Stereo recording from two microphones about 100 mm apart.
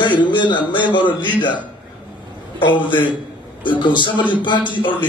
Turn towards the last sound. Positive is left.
turn(degrees=55)  # may be behind; listen again after turning